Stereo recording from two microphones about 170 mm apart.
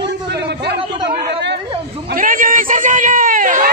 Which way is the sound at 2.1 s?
55° right (ahead or behind).